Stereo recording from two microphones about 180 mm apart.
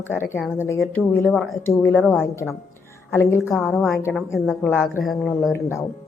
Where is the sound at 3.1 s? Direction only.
15° left (ahead or behind).